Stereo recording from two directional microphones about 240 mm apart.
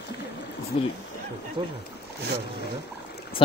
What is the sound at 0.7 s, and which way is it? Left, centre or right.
Speech, left.